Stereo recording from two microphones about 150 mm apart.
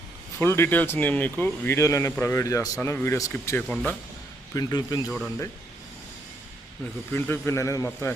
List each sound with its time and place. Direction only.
0.3 s speech: 15° left (ahead or behind)
4.5 s speech: 25° left (ahead or behind)
5.0 s speech: centre (ahead or behind)
7.1 s speech: 15° left (ahead or behind)